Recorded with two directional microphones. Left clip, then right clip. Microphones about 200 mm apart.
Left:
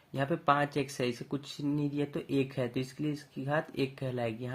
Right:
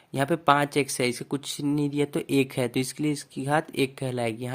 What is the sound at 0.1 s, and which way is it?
Speech, 35° right (ahead or behind).